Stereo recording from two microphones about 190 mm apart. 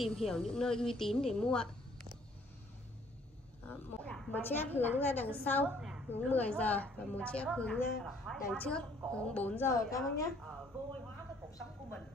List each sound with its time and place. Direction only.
0.0 s a woman's voice: centre (ahead or behind)
3.6 s a woman's voice: 5° left (ahead or behind)
5.8 s a sound: centre (ahead or behind)
6.0 s a woman's voice: 10° left (ahead or behind)